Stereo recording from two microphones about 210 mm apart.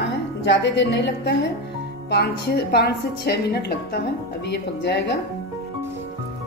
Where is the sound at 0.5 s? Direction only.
55° left (ahead or behind).